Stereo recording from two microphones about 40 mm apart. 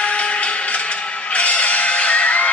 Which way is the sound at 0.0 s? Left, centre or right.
Left.